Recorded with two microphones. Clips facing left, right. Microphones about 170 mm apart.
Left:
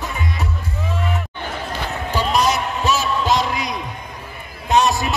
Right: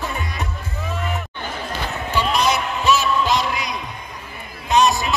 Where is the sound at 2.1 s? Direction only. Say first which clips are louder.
Left 1 dB; 40° left (ahead or behind).